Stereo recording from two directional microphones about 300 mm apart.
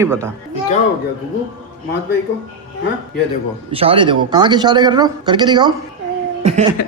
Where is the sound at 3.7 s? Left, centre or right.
Centre.